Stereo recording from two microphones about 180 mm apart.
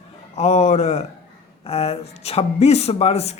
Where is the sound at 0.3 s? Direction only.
35° left (ahead or behind).